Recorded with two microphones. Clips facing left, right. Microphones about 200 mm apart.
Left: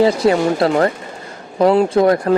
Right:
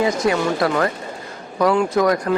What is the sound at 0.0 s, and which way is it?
Speech, 30° left (ahead or behind).